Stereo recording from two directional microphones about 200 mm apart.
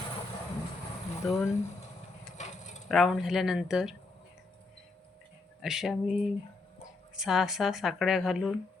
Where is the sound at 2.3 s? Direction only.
35° left (ahead or behind).